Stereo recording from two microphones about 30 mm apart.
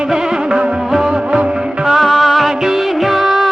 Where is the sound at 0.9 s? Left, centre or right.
Centre.